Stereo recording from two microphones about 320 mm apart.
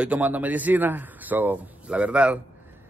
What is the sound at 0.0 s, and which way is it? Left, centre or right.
Speech, centre.